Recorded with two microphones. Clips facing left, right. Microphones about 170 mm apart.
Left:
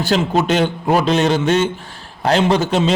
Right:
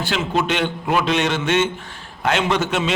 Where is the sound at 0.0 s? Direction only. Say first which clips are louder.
Left 5 dB; 40° left (ahead or behind).